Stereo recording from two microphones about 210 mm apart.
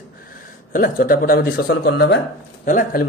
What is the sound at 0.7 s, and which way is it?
Speech, 45° left (ahead or behind).